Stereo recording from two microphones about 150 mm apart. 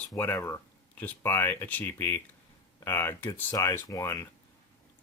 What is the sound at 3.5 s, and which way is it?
Speech, 25° left (ahead or behind).